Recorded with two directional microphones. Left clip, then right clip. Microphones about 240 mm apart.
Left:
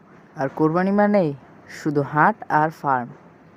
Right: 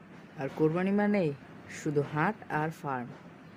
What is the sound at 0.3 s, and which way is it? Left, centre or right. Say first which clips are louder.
Speech: left 9 dB; centre.